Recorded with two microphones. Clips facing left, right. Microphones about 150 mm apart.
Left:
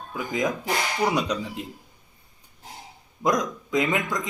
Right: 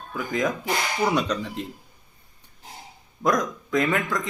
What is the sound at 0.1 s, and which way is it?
A man's voice, 15° left (ahead or behind).